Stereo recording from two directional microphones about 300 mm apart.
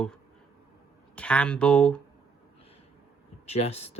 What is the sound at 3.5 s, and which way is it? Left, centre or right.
Speech, left.